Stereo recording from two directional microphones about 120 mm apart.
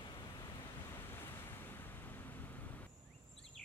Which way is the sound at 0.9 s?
20° left (ahead or behind).